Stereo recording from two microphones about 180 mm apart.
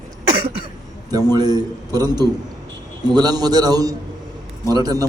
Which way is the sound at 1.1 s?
20° right (ahead or behind).